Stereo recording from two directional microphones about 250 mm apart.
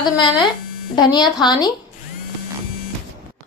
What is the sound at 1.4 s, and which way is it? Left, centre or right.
Speech, centre.